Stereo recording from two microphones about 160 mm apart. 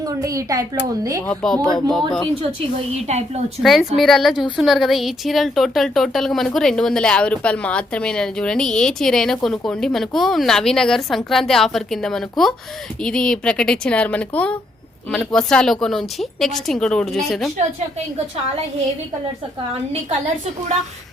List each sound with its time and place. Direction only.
0.2 s speech: 20° right (ahead or behind)
1.3 s a woman's voice: 5° left (ahead or behind)
2.4 s a woman's voice: 35° right (ahead or behind)
3.6 s a woman's voice: centre (ahead or behind)